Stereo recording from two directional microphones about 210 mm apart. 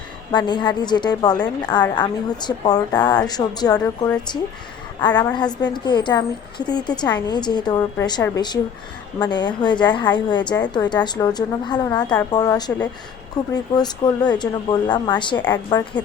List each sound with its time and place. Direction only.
0.3 s a woman's voice: 20° left (ahead or behind)